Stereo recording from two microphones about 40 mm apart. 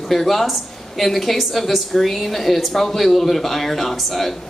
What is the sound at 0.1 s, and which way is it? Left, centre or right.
A woman's voice, centre.